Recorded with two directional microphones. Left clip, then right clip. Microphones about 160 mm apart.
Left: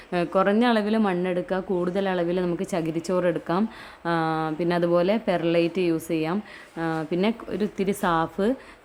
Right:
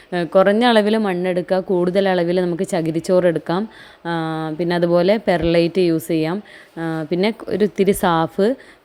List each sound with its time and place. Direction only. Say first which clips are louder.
0.1 s a woman's voice: right 7 dB; 25° right (ahead or behind)
1.0 s speech: right 5 dB; 20° right (ahead or behind)
4.0 s speech: right 1 dB; 15° right (ahead or behind)